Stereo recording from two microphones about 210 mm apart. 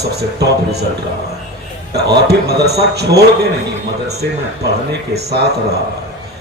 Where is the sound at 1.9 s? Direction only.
50° right (ahead or behind).